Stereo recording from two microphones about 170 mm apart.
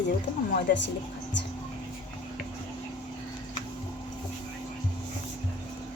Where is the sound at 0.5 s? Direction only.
90° left.